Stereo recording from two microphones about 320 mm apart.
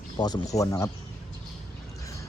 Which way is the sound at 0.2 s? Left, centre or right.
Centre.